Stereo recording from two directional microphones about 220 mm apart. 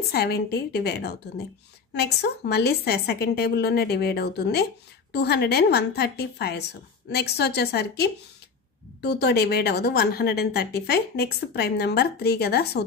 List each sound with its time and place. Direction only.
0.1 s a woman's voice: 45° left (ahead or behind)